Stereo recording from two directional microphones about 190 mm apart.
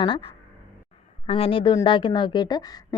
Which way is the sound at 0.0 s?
25° left (ahead or behind).